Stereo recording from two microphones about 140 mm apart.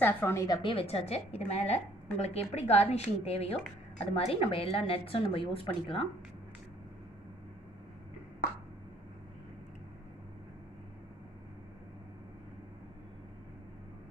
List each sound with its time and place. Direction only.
0.0 s a woman's voice: 15° left (ahead or behind)
0.6 s a woman's voice: 40° left (ahead or behind)